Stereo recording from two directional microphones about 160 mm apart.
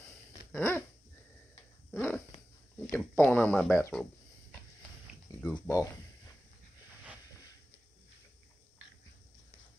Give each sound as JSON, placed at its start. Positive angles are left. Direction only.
{"t": 0.5, "sound": "dog", "side_deg": 15}
{"t": 2.0, "sound": "speech", "side_deg": 10}
{"t": 3.9, "sound": "a sound", "side_deg": 5}
{"t": 5.4, "sound": "speech", "side_deg": 15}